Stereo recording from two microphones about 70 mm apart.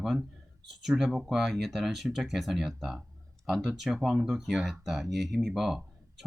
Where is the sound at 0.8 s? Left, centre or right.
Centre.